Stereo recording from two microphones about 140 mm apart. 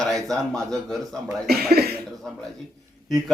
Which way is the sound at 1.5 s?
90° right.